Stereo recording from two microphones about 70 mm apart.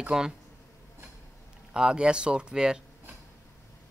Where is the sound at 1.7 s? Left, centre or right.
Centre.